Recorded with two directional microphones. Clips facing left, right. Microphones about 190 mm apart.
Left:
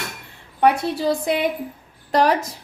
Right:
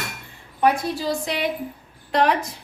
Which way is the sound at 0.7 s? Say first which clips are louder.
Left 3 dB; 60° left (ahead or behind).